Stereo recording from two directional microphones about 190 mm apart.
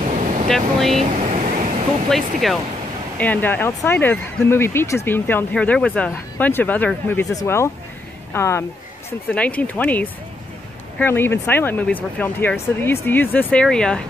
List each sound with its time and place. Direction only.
0.1 s air conditioning: 40° right (ahead or behind)
0.5 s speech: centre (ahead or behind)
0.9 s vehicle: 35° right (ahead or behind)
2.0 s speech: centre (ahead or behind)